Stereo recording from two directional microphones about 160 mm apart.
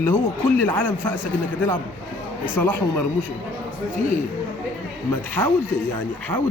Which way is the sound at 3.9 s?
55° left (ahead or behind).